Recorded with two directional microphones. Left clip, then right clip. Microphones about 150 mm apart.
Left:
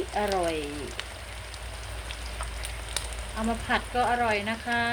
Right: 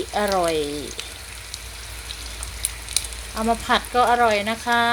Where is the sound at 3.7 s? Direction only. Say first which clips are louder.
Right 7 dB; 45° right (ahead or behind).